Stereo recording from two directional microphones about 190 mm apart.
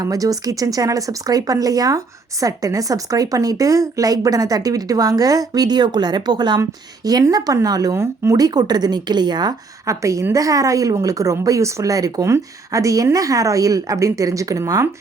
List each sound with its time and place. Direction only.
0.0 s speech: 20° right (ahead or behind)